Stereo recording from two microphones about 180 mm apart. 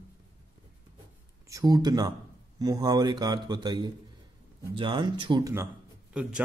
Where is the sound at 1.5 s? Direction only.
20° right (ahead or behind).